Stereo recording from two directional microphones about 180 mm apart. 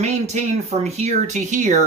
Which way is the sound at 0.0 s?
40° right (ahead or behind).